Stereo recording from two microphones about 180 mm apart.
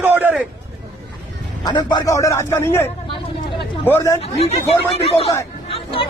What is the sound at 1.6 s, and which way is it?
Speech, 25° left (ahead or behind).